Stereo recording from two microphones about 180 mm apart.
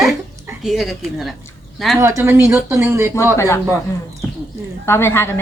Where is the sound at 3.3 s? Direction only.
15° left (ahead or behind).